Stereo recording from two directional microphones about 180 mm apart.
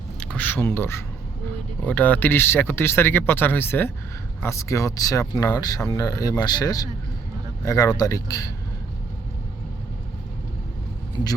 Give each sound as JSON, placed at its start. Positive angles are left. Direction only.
{"t": 0.2, "sound": "speech", "side_deg": 5}